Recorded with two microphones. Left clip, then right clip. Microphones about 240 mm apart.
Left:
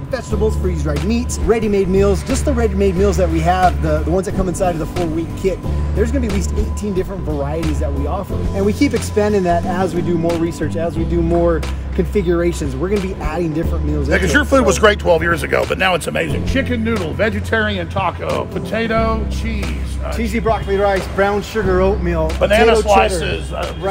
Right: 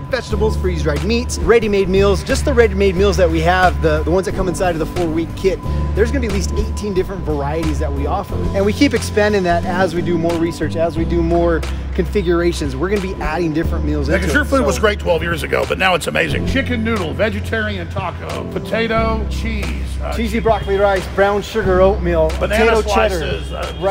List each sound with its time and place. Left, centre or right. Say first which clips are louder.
0.1 s speech: right 1 dB; centre
14.1 s speech: left 3 dB; left; by 15.3 s centre
15.5 s speech: right 3 dB; centre
17.5 s speech: left 3 dB; left
18.3 s speech: left 1 dB; centre
20.2 s speech: right 2 dB; right
22.4 s speech: left 7 dB; left